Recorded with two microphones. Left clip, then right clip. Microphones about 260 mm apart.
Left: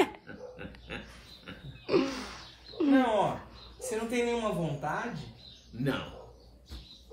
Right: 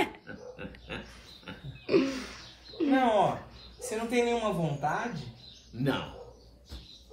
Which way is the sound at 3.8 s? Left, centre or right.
Centre.